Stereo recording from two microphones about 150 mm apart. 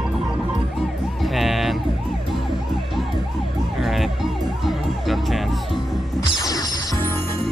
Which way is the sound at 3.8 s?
Centre (ahead or behind).